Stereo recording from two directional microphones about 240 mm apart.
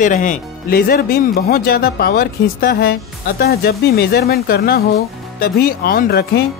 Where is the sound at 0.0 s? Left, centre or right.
Left.